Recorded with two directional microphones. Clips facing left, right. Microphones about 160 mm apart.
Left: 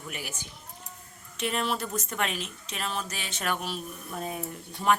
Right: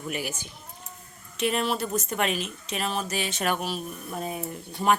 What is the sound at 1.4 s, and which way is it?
Speech, 10° right (ahead or behind).